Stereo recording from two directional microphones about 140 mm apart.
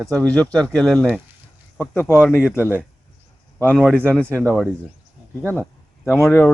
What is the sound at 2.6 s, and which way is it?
Speech, 10° right (ahead or behind).